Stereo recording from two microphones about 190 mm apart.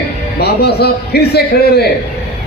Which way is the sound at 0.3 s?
60° left (ahead or behind).